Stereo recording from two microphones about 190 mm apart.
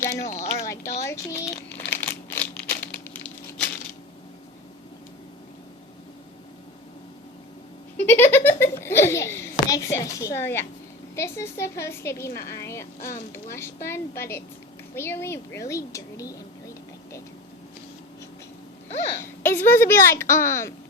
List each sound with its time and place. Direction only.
0.2 s speech: 40° left (ahead or behind)
0.6 s a sound: 15° left (ahead or behind)
1.0 s a child's voice: 15° left (ahead or behind)
1.9 s crumpling: 10° left (ahead or behind)
7.9 s giggle: 10° left (ahead or behind)
11.1 s a child's voice: 15° left (ahead or behind)
19.2 s speech: 10° left (ahead or behind)